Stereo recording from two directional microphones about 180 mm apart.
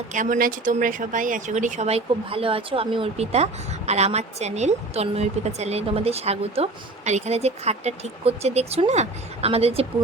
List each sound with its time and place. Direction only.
0.1 s speech: 45° right (ahead or behind)